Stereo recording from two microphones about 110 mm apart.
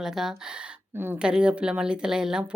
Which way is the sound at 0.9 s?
20° right (ahead or behind).